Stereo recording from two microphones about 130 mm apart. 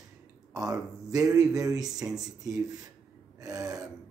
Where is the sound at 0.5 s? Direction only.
25° right (ahead or behind).